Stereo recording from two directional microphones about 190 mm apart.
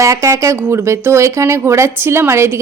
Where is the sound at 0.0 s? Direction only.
15° right (ahead or behind).